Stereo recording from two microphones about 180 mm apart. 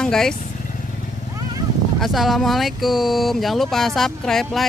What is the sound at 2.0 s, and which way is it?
Speech, centre (ahead or behind).